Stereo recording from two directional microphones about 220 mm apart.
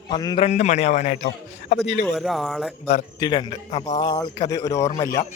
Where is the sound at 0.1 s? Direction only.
20° left (ahead or behind).